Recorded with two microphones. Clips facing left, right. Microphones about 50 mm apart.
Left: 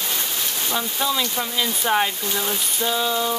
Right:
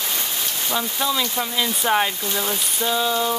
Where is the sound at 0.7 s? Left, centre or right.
Centre.